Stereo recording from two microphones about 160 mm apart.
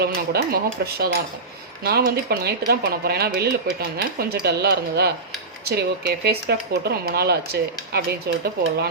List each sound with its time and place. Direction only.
0.0 s speech: 80° right